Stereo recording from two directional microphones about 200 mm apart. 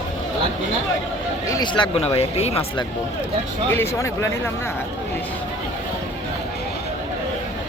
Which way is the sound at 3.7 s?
10° left (ahead or behind).